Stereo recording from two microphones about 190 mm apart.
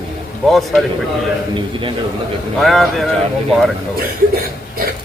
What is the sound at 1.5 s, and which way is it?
Speech, 25° right (ahead or behind).